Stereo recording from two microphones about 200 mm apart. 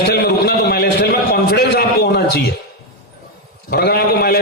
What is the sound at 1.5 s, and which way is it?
Speech, 55° left (ahead or behind).